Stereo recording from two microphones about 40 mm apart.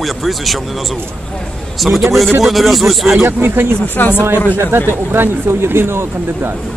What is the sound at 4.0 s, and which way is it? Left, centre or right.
Speech, left.